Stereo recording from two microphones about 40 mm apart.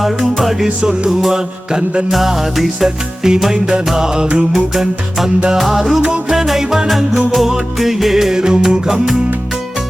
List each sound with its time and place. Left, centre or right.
0.2 s music: centre
0.8 s music: centre
2.0 s music: centre